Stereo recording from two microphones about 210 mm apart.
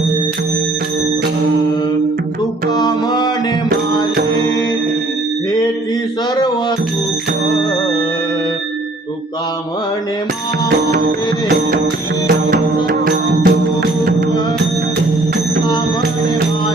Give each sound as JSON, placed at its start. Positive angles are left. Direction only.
{"t": 2.6, "sound": "music", "side_deg": 20}
{"t": 6.3, "sound": "music", "side_deg": 20}
{"t": 12.3, "sound": "music", "side_deg": -45}